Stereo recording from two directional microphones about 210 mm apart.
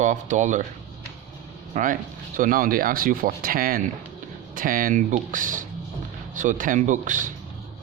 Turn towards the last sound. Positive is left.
turn(degrees=-40)  # may be behind; listen again after turning